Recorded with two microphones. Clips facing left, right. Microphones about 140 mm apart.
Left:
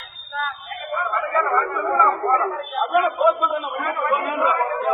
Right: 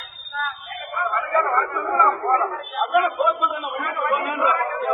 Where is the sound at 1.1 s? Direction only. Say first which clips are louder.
Right 1 dB; centre (ahead or behind).